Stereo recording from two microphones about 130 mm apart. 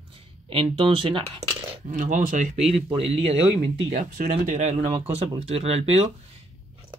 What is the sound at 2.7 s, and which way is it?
Speech, 50° right (ahead or behind).